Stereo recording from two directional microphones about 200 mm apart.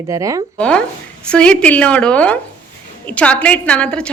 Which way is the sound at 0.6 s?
5° left (ahead or behind).